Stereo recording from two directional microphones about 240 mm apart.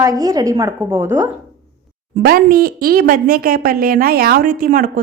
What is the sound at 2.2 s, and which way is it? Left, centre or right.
A woman's voice, right.